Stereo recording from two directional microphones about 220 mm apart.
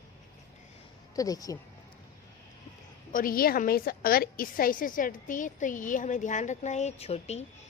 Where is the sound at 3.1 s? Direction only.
40° left (ahead or behind).